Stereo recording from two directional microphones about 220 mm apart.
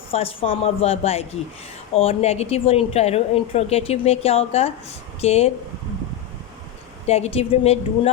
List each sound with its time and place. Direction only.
0.1 s speech: 25° left (ahead or behind)
7.1 s speech: 30° left (ahead or behind)